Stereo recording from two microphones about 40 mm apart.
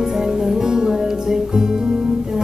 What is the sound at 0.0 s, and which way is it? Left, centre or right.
Music, centre.